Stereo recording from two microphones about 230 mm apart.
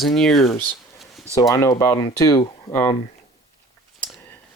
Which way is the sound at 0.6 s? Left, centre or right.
Centre.